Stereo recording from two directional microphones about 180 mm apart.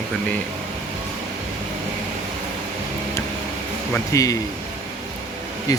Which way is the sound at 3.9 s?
20° left (ahead or behind).